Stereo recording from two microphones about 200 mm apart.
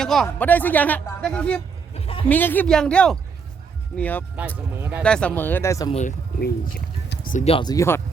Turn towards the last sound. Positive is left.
turn(degrees=15)  # may be behind; listen again after turning